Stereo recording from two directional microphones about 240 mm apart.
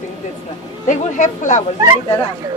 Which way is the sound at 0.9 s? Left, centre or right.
Left.